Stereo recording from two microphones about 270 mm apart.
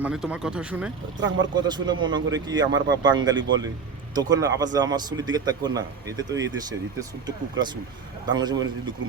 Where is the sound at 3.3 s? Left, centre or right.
Right.